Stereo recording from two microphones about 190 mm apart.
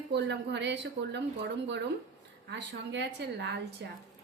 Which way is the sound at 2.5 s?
65° right (ahead or behind).